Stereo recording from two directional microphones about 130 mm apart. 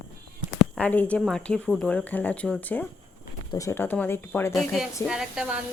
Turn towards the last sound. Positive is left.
turn(degrees=-5)  # may be behind; listen again after turning